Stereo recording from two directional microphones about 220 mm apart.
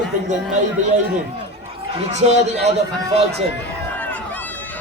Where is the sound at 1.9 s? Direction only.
30° right (ahead or behind).